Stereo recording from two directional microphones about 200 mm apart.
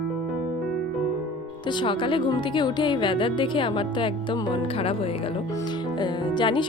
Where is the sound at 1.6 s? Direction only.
25° left (ahead or behind).